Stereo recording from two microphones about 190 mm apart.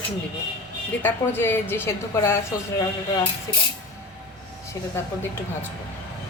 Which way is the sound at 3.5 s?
20° left (ahead or behind).